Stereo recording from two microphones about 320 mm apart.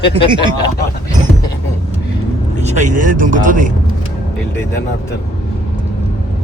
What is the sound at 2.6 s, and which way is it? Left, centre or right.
Speech, right.